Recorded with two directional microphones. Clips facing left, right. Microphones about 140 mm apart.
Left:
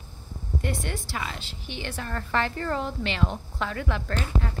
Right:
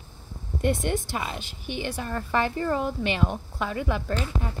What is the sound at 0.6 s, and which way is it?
A woman's voice, 20° right (ahead or behind).